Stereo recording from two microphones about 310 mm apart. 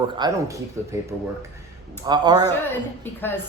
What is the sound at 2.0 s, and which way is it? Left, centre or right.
Speech, centre.